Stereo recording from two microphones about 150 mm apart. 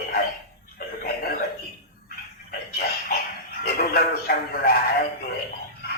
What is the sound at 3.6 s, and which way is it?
Speech, 85° left.